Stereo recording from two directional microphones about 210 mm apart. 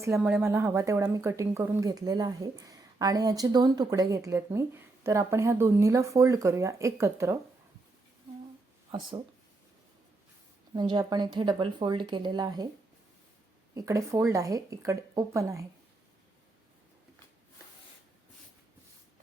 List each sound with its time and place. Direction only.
0.0 s a woman's voice: 10° right (ahead or behind)
8.9 s speech: 20° right (ahead or behind)
10.8 s speech: 20° right (ahead or behind)
13.7 s a woman's voice: 15° right (ahead or behind)